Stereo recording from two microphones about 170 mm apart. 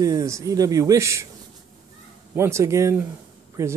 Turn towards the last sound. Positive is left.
turn(degrees=-15)  # may be behind; listen again after turning